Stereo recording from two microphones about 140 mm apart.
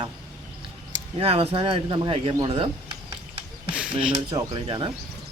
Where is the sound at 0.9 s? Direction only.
40° right (ahead or behind).